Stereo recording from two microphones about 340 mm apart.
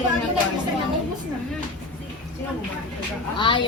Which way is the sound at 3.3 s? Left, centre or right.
Centre.